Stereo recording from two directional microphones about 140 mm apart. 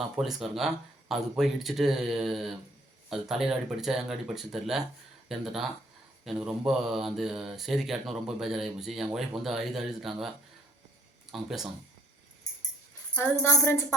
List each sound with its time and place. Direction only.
0.0 s speech: centre (ahead or behind)
13.1 s speech: 15° left (ahead or behind)